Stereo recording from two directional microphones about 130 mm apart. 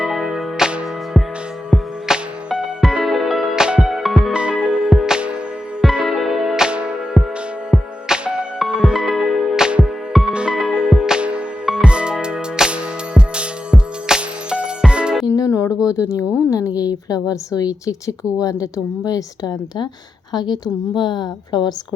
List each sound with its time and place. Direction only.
0.0 s music: centre (ahead or behind)
7.2 s music: 10° left (ahead or behind)
8.0 s music: 5° right (ahead or behind)
15.3 s music: 20° left (ahead or behind)
15.9 s a sound: 25° left (ahead or behind)
18.6 s a woman's voice: 30° left (ahead or behind)